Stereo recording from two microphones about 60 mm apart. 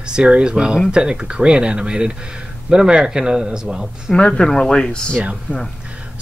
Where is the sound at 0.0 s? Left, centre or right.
Centre.